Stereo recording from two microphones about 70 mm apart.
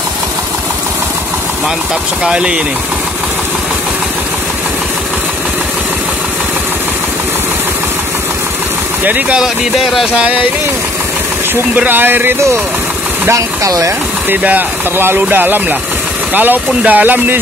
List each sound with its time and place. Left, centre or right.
2.2 s speech: centre
9.0 s speech: right
9.4 s speech: centre
11.7 s speech: right
13.3 s speech: right
14.3 s speech: right